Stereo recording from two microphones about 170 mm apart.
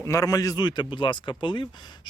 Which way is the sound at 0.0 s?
20° left (ahead or behind).